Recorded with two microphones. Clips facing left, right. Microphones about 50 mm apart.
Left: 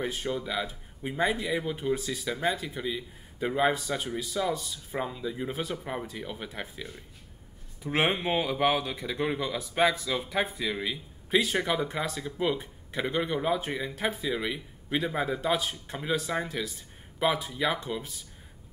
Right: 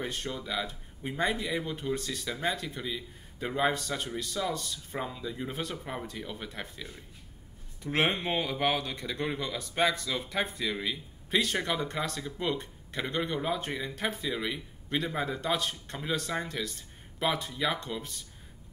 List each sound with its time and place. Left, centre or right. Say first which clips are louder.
0.0 s speech: left 4 dB; centre